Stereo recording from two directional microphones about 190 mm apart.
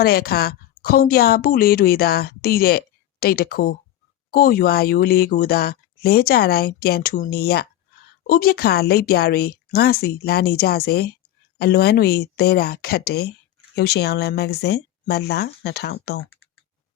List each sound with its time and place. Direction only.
0.0 s a woman's voice: 55° left (ahead or behind)